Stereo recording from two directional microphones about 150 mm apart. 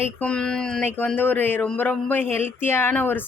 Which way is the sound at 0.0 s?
10° left (ahead or behind).